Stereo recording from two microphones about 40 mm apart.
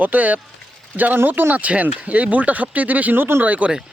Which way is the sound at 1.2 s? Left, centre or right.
Right.